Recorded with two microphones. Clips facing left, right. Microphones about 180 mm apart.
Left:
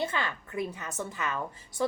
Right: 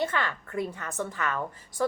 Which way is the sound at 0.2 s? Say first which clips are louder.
Right 2 dB; 10° left (ahead or behind).